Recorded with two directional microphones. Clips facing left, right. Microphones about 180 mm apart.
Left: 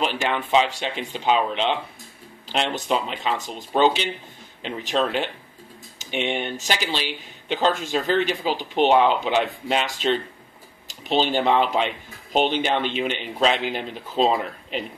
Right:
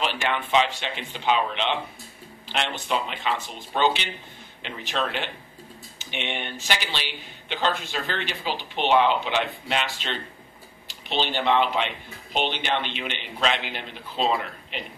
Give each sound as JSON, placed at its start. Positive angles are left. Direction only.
{"t": 0.3, "sound": "speech", "side_deg": 35}